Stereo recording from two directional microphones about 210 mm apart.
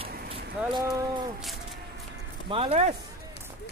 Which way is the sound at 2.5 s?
30° right (ahead or behind).